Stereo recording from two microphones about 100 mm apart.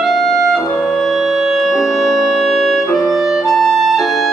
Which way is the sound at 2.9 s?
Centre (ahead or behind).